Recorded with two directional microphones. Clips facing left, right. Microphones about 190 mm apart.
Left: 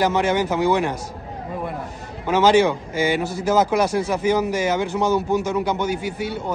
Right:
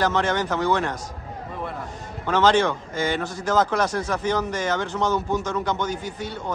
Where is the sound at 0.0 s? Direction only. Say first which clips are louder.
Left 3 dB; 10° left (ahead or behind).